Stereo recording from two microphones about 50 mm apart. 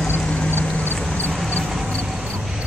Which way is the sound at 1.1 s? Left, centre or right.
Left.